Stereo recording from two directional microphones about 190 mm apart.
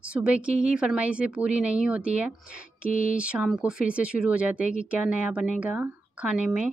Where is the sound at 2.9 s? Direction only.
45° left (ahead or behind).